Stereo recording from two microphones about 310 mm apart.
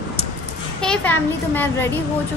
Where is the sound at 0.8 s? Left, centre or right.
Centre.